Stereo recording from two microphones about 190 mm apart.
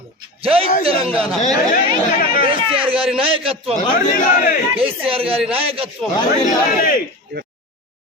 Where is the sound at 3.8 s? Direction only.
50° left (ahead or behind).